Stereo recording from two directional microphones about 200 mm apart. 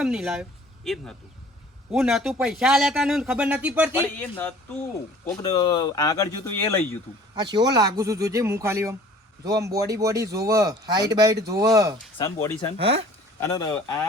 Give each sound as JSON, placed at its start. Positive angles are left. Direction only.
{"t": 0.0, "sound": "speech", "side_deg": -5}
{"t": 4.2, "sound": "speech", "side_deg": 10}
{"t": 5.4, "sound": "speech", "side_deg": 20}
{"t": 7.3, "sound": "speech", "side_deg": -20}
{"t": 12.1, "sound": "speech", "side_deg": 20}
{"t": 12.7, "sound": "speech", "side_deg": -30}
{"t": 13.4, "sound": "speech", "side_deg": 20}